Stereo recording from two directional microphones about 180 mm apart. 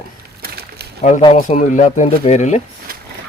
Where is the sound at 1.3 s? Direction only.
40° left (ahead or behind).